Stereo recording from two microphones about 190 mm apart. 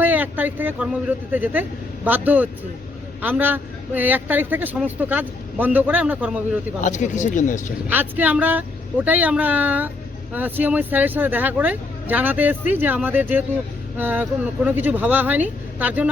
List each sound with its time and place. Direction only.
0.0 s a man's voice: 10° right (ahead or behind)
6.8 s speech: 40° left (ahead or behind)
7.9 s a man's voice: 10° right (ahead or behind)